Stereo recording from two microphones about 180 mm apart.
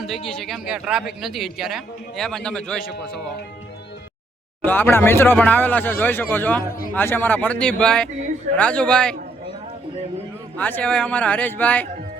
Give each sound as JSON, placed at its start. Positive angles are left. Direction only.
{"t": 0.0, "sound": "speech", "side_deg": 0}
{"t": 4.6, "sound": "speech", "side_deg": 10}
{"t": 6.7, "sound": "a man's voice", "side_deg": 55}
{"t": 6.9, "sound": "speech", "side_deg": 10}
{"t": 10.6, "sound": "speech", "side_deg": 10}